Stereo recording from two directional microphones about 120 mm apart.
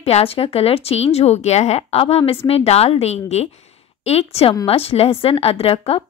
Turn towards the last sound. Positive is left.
turn(degrees=55)  # may be behind; listen again after turning